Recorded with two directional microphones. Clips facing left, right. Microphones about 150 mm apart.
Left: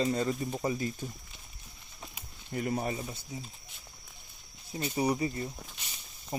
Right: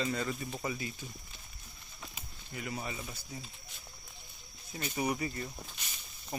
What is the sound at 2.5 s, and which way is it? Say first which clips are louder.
Speech: left 8 dB; 45° left (ahead or behind).